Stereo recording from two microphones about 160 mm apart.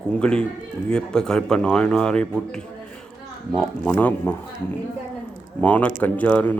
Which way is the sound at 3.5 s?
5° left (ahead or behind).